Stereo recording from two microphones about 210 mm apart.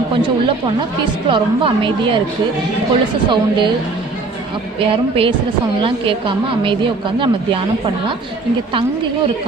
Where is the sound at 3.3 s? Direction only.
20° right (ahead or behind).